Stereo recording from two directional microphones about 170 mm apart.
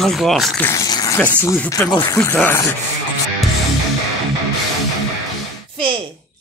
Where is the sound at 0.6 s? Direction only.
15° left (ahead or behind).